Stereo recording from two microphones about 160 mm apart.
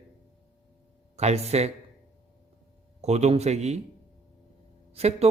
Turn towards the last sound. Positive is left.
turn(degrees=-40)  # may be behind; listen again after turning